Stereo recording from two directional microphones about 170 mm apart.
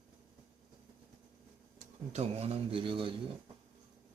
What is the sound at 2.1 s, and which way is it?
A man's voice, 40° right (ahead or behind).